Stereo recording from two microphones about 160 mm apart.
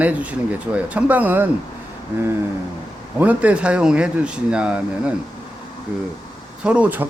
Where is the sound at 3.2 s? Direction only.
10° right (ahead or behind).